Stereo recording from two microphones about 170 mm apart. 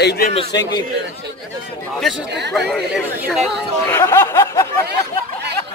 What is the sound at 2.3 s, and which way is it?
Speech, 80° right.